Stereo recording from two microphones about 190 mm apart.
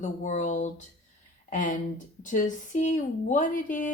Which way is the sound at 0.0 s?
40° left (ahead or behind).